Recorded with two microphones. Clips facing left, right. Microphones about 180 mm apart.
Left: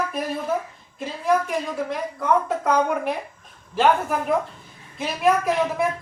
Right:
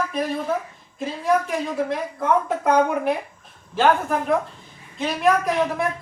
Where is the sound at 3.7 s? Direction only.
Centre (ahead or behind).